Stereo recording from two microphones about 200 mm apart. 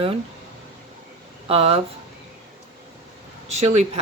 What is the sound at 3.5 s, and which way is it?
Speech, 30° right (ahead or behind).